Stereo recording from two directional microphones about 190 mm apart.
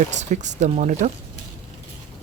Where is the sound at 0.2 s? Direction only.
40° right (ahead or behind).